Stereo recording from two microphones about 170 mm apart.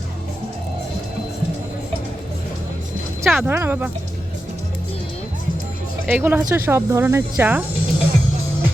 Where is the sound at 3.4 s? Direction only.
10° right (ahead or behind).